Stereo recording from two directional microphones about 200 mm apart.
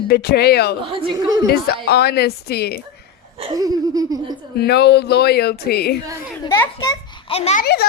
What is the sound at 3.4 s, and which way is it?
Laughter, 20° right (ahead or behind).